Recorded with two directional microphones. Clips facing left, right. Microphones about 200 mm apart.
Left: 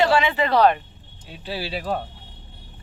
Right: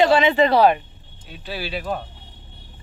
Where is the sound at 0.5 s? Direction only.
10° right (ahead or behind).